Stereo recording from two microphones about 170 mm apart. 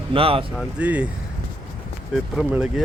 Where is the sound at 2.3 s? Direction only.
5° right (ahead or behind).